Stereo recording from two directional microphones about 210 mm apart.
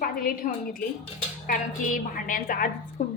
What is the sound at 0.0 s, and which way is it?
A woman's voice, 45° left (ahead or behind).